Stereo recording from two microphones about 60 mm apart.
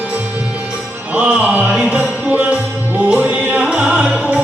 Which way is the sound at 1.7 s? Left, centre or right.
Centre.